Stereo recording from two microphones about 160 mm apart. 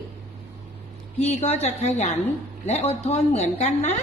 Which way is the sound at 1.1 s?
40° left (ahead or behind).